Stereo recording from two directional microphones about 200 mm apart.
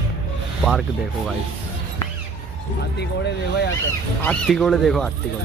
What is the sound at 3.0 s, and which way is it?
Speech, 55° left (ahead or behind).